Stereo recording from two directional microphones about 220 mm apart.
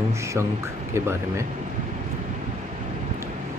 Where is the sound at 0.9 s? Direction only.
10° right (ahead or behind).